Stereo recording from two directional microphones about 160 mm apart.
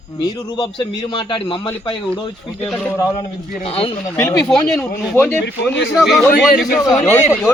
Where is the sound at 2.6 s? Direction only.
10° left (ahead or behind).